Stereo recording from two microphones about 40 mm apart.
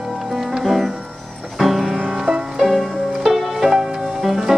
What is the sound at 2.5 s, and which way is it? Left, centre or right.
Music, centre.